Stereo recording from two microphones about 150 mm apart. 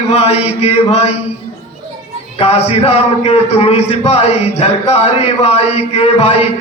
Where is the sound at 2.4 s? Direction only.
40° left (ahead or behind).